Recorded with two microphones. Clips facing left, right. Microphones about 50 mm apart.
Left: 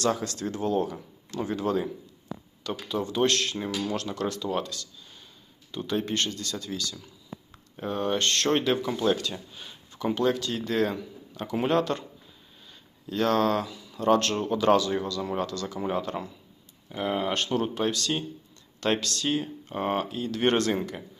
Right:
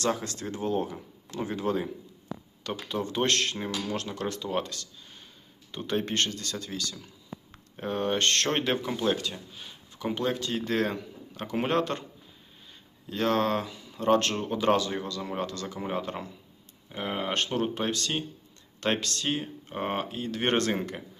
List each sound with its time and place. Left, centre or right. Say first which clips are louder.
0.0 s speech: left 2 dB; right
2.6 s speech: left 2 dB; right
3.9 s speech: left 2 dB; right
4.7 s a sound: left 1 dB; right
5.7 s speech: left 1 dB; right
9.0 s speech: left 2 dB; right
9.3 s speech: left 3 dB; centre
10.2 s speech: left 3 dB; centre
10.7 s speech: left 3 dB; right
13.1 s speech: left 2 dB; right